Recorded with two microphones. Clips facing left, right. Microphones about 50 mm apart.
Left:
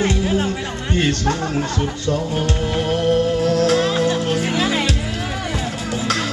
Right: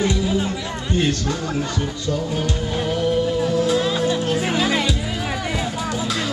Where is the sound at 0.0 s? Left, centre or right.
Left.